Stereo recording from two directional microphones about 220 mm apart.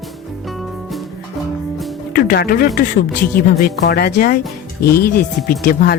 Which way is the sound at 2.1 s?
40° left (ahead or behind).